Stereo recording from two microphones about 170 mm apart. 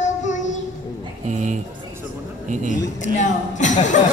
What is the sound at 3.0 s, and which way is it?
Child singing, 45° left (ahead or behind).